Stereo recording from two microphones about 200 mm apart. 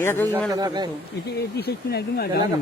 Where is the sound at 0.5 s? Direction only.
20° right (ahead or behind).